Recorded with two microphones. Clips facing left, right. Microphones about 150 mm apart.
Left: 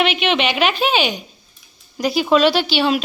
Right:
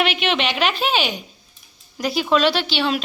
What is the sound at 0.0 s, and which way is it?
A woman's voice, centre (ahead or behind).